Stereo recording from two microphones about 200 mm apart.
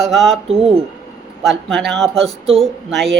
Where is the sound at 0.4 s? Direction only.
30° right (ahead or behind).